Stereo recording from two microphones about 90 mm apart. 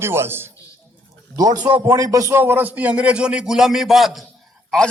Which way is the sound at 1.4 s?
45° right (ahead or behind).